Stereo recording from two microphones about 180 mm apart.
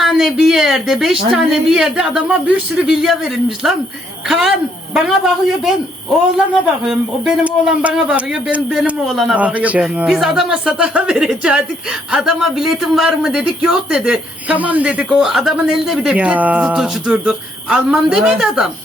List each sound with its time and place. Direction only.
0.0 s a man's voice: centre (ahead or behind)
6.8 s a man's voice: 5° right (ahead or behind)